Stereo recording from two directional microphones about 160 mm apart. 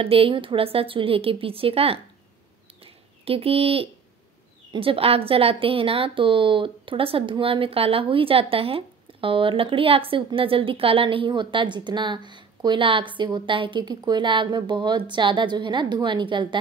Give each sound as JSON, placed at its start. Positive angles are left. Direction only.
{"t": 0.0, "sound": "a woman's voice", "side_deg": -35}
{"t": 2.8, "sound": "bird", "side_deg": -35}
{"t": 4.7, "sound": "a woman's voice", "side_deg": -35}